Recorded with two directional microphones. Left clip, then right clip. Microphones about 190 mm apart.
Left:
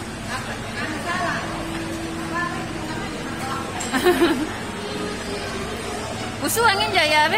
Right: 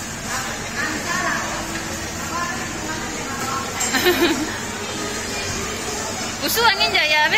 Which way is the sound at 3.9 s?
30° left (ahead or behind).